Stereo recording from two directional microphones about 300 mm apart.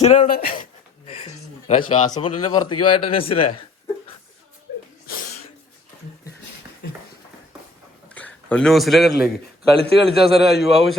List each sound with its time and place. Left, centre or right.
0.0 s speech: left
1.0 s speech: centre
2.6 s a man's voice: left
3.1 s speech: centre
8.4 s speech: centre
9.7 s a man's voice: centre
10.4 s speech: centre